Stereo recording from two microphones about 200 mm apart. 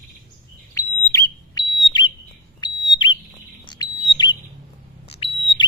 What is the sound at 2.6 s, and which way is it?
Bird, 20° left (ahead or behind).